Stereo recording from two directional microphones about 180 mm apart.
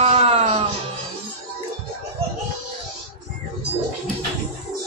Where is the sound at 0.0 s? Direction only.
35° right (ahead or behind).